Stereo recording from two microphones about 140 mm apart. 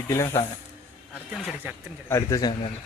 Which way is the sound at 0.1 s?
20° left (ahead or behind).